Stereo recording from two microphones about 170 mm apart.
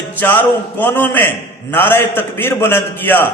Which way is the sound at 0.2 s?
10° left (ahead or behind).